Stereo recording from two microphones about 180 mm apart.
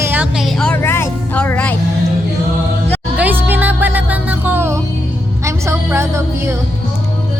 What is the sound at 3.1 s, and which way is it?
Music, 10° right (ahead or behind).